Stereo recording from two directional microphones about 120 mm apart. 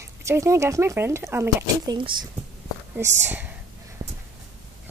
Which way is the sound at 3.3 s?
15° right (ahead or behind).